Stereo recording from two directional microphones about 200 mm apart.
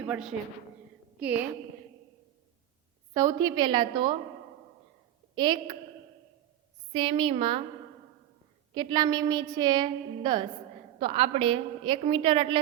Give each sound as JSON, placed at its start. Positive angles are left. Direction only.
{"t": 0.1, "sound": "a man's voice", "side_deg": -5}
{"t": 3.2, "sound": "a woman's voice", "side_deg": -15}
{"t": 5.3, "sound": "a woman's voice", "side_deg": -25}
{"t": 6.9, "sound": "a woman's voice", "side_deg": -25}
{"t": 8.7, "sound": "a woman's voice", "side_deg": -20}